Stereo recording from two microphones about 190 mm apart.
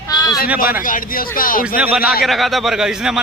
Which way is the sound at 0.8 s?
45° left (ahead or behind).